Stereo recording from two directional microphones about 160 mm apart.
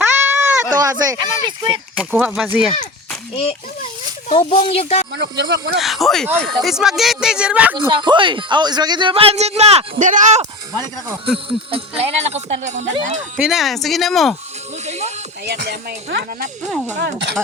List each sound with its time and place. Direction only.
0.2 s sheep: 15° right (ahead or behind)
0.7 s speech: 25° right (ahead or behind)
2.0 s speech: 10° right (ahead or behind)
4.4 s speech: 35° left (ahead or behind)
5.1 s speech: 90° right
5.8 s speech: centre (ahead or behind)
7.8 s speech: 30° right (ahead or behind); by 10.4 s 50° right (ahead or behind)
11.3 s speech: 35° right (ahead or behind)
13.4 s speech: centre (ahead or behind)
14.8 s music: 45° right (ahead or behind)
15.4 s speech: 80° right